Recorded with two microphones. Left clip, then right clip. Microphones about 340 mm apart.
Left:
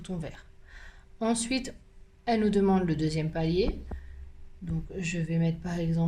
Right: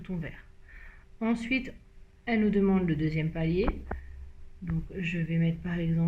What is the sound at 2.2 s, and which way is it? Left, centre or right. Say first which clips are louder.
Speech: left 2 dB; left.